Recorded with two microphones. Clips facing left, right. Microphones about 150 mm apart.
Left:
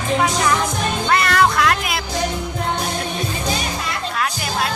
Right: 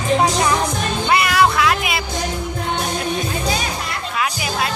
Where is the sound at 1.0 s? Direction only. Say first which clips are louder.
Right 1 dB; 5° right (ahead or behind).